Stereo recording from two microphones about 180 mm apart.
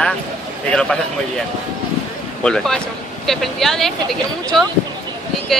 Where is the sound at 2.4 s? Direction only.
5° left (ahead or behind).